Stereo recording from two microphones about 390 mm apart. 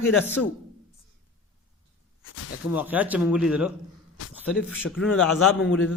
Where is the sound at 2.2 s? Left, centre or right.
Left.